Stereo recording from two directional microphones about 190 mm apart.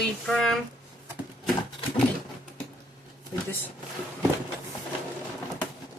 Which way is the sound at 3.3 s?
15° left (ahead or behind).